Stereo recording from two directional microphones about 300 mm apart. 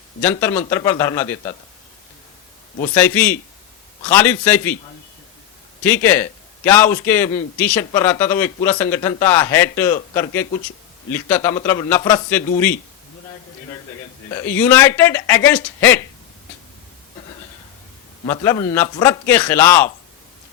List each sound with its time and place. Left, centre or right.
0.2 s a man's voice: centre
2.8 s a man's voice: centre
5.8 s a man's voice: centre
14.3 s a man's voice: centre
18.3 s a man's voice: centre